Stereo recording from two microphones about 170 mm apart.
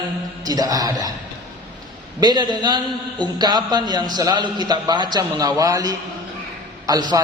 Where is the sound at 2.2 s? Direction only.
25° right (ahead or behind).